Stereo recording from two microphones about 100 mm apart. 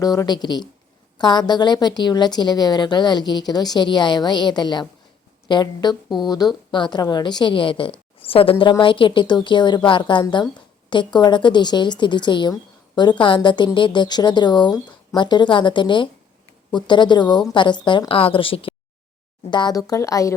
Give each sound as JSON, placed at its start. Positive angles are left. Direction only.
{"t": 0.0, "sound": "a woman's voice", "side_deg": 40}
{"t": 18.1, "sound": "a woman's voice", "side_deg": 65}
{"t": 19.5, "sound": "a woman's voice", "side_deg": 50}
{"t": 19.7, "sound": "speech", "side_deg": 35}